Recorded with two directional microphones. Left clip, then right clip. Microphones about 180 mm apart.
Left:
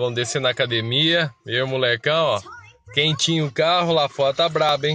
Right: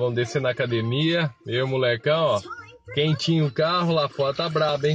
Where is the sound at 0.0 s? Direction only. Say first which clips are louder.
Left 2 dB; 10° left (ahead or behind).